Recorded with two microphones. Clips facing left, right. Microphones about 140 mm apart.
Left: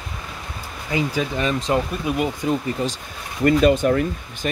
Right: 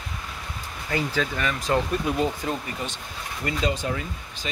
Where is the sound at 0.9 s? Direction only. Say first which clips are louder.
Left 3 dB; 15° left (ahead or behind).